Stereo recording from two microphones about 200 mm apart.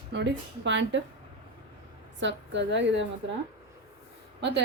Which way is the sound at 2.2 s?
65° right (ahead or behind).